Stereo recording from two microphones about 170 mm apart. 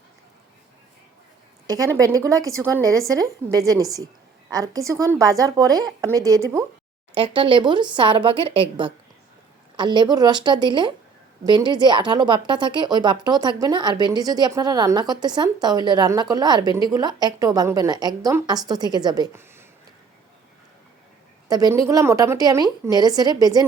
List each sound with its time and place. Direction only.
1.6 s a woman's voice: 20° right (ahead or behind)
7.1 s speech: 30° right (ahead or behind)
21.4 s speech: 20° right (ahead or behind)